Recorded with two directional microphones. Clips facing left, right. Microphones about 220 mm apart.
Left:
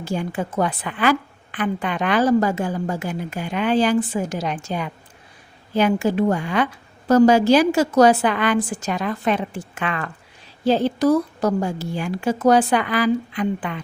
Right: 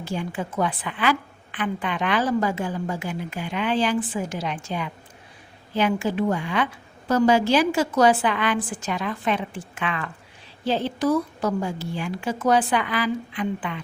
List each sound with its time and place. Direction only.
0.0 s a woman's voice: 45° left (ahead or behind)